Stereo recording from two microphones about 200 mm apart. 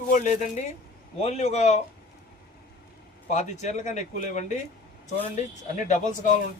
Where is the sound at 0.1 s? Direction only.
40° left (ahead or behind).